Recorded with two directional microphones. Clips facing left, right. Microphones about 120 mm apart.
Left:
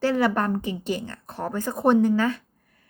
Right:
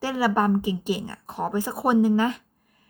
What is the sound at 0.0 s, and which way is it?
A woman's voice, 10° right (ahead or behind).